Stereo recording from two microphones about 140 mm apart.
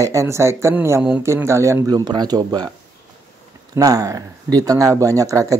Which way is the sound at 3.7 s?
25° right (ahead or behind).